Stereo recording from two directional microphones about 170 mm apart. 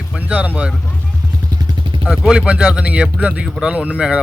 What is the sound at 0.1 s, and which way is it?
Speech, 10° right (ahead or behind).